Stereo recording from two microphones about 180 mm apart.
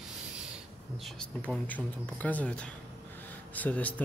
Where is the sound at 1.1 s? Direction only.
5° left (ahead or behind).